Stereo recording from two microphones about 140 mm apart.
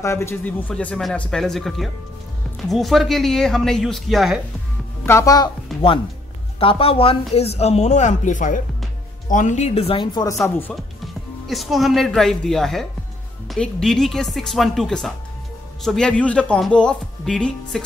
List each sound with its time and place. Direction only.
0.0 s speech: 20° left (ahead or behind); by 4.4 s centre (ahead or behind)
5.0 s speech: 20° left (ahead or behind)
5.7 s music: centre (ahead or behind)
6.6 s speech: 40° left (ahead or behind)
11.4 s speech: centre (ahead or behind)